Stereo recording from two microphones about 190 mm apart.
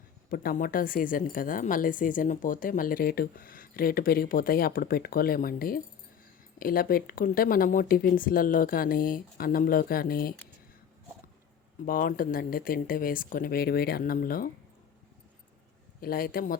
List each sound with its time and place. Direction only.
0.3 s speech: 50° left (ahead or behind)
11.9 s speech: 50° left (ahead or behind)
16.0 s speech: 50° left (ahead or behind)